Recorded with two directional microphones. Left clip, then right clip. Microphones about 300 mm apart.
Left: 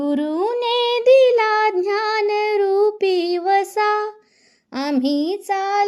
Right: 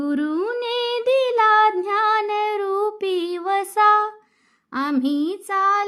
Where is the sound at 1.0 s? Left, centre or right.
Centre.